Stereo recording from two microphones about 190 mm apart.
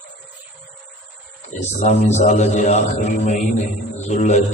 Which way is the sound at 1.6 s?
35° left (ahead or behind).